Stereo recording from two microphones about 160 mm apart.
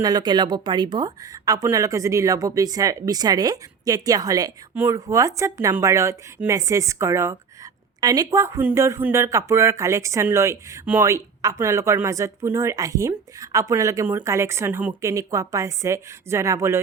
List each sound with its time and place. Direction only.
0.0 s speech: 25° right (ahead or behind)